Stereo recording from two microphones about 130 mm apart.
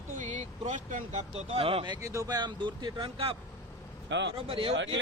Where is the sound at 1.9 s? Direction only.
25° right (ahead or behind); by 3.4 s 45° right (ahead or behind).